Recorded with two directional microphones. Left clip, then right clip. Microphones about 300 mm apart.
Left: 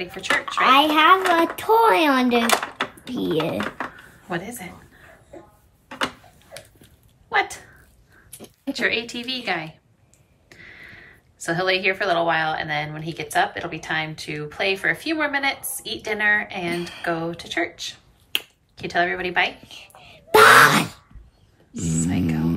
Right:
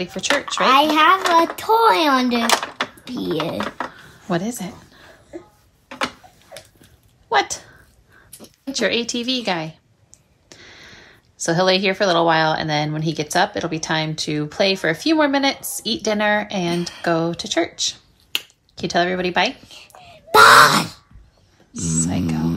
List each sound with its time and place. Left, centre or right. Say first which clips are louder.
0.0 s speech: right 2 dB; centre
7.2 s speech: right 3 dB; centre
19.7 s whispering: right 1 dB; centre
21.7 s speech: right 3 dB; centre
22.0 s a sound: left 1 dB; centre